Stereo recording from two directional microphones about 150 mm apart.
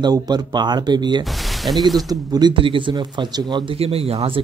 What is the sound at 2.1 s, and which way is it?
Speech, 30° right (ahead or behind).